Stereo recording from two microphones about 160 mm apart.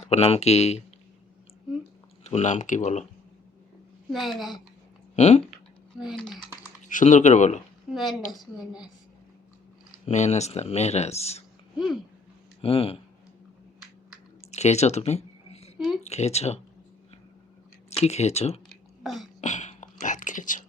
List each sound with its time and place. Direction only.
0.0 s speech: 40° left (ahead or behind)
2.2 s speech: 45° left (ahead or behind)
4.1 s a woman's voice: centre (ahead or behind)
5.1 s speech: 45° left (ahead or behind)
6.0 s a woman's voice: centre (ahead or behind)
6.8 s speech: 50° left (ahead or behind)
7.9 s a woman's voice: 5° right (ahead or behind)
10.1 s speech: 45° left (ahead or behind)
12.6 s speech: 35° left (ahead or behind)
14.5 s a sound: 45° left (ahead or behind)
16.0 s speech: 45° left (ahead or behind)
17.9 s speech: 40° left (ahead or behind)
18.7 s a sound: centre (ahead or behind)
19.4 s a sound: 45° left (ahead or behind)